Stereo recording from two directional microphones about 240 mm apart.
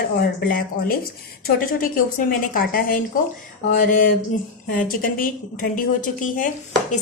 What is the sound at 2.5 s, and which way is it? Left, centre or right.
A woman's voice, left.